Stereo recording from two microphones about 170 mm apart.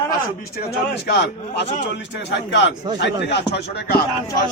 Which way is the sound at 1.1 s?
80° left.